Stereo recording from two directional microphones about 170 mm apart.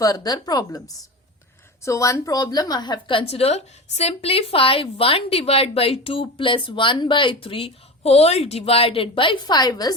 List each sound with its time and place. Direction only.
0.0 s a woman's voice: 20° left (ahead or behind)
1.8 s a woman's voice: 20° left (ahead or behind)